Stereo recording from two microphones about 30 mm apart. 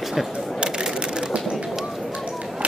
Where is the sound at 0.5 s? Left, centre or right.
Right.